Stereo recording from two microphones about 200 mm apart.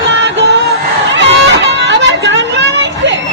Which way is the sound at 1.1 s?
60° right (ahead or behind).